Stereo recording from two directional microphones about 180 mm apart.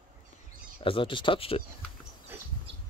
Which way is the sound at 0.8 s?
30° left (ahead or behind).